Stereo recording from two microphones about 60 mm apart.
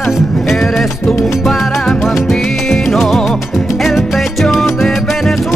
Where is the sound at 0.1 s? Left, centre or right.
Centre.